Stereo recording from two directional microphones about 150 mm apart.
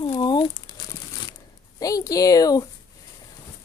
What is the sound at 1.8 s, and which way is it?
Speech, 25° left (ahead or behind).